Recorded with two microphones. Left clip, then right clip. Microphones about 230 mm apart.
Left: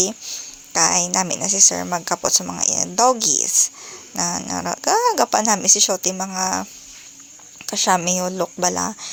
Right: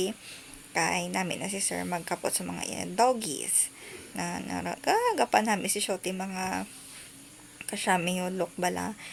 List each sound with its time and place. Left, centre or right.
0.0 s a woman's voice: centre
7.7 s a woman's voice: centre